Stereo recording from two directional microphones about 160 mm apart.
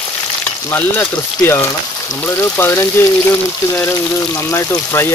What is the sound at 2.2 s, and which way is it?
Speech, 15° left (ahead or behind).